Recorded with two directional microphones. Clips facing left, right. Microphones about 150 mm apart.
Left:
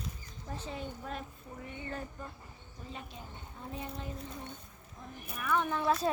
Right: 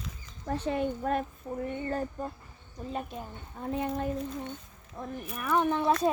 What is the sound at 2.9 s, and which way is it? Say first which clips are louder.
Speech: right 10 dB; 50° right (ahead or behind).